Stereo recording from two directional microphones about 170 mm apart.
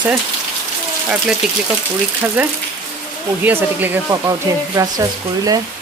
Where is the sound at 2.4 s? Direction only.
10° right (ahead or behind).